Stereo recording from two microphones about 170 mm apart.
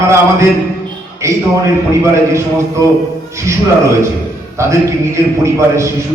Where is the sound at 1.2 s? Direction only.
15° right (ahead or behind).